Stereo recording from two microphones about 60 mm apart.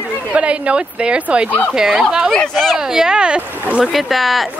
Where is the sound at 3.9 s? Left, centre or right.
Centre.